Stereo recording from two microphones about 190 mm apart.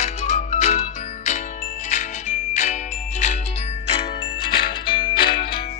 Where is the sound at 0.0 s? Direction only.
35° left (ahead or behind).